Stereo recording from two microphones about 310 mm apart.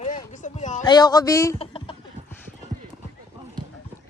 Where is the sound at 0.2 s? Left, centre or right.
Left.